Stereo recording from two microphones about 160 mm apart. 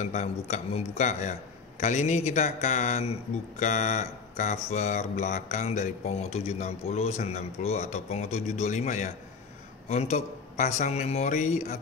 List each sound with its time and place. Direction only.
0.0 s a man's voice: 45° left (ahead or behind)